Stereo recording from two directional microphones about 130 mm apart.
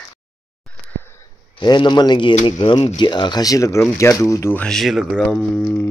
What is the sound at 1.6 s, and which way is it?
A man's voice, 35° left (ahead or behind).